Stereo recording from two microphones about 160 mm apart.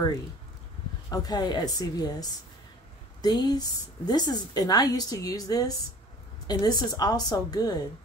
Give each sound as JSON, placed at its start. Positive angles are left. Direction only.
{"t": 1.1, "sound": "a woman's voice", "side_deg": 25}